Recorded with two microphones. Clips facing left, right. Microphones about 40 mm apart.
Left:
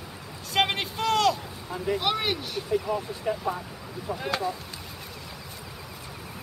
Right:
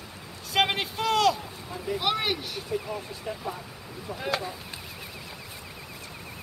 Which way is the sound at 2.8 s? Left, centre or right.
Centre.